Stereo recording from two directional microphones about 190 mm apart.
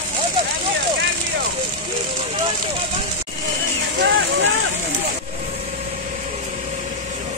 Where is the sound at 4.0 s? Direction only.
80° right.